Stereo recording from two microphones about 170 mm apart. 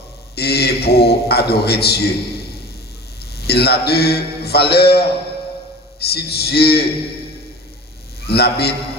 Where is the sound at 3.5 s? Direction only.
70° left (ahead or behind).